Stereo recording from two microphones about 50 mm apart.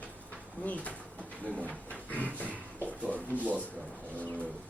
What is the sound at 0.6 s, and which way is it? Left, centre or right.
Speech, left.